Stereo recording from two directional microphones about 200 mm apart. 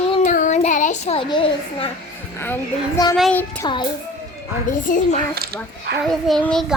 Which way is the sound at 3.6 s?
20° left (ahead or behind).